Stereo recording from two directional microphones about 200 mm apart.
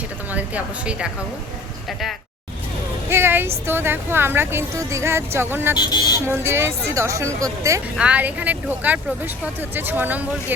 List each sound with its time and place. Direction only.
0.3 s speech: 5° right (ahead or behind)
3.1 s speech: 10° right (ahead or behind)
5.7 s speech: 20° left (ahead or behind)
6.2 s speech: 10° right (ahead or behind)